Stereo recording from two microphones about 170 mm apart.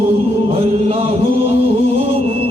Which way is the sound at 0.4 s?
35° right (ahead or behind).